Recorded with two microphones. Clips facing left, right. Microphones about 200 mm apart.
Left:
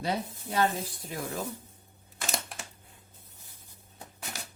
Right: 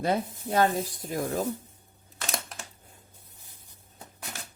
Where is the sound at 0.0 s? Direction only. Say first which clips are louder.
Right 5 dB; 50° right (ahead or behind).